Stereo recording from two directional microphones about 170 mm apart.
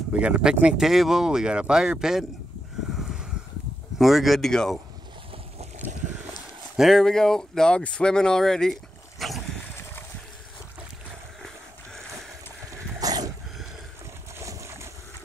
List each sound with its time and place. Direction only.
0.1 s speech: 5° right (ahead or behind)
3.0 s a sound: centre (ahead or behind)
4.0 s speech: centre (ahead or behind)
6.8 s speech: centre (ahead or behind)
9.2 s dog: centre (ahead or behind)
12.7 s horse: 20° right (ahead or behind)
14.4 s boat: 15° right (ahead or behind)